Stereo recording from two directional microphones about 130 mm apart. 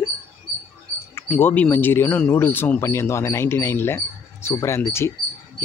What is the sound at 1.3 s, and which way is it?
Speech, 10° left (ahead or behind).